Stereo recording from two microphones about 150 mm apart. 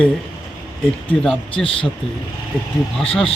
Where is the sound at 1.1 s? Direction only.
5° left (ahead or behind).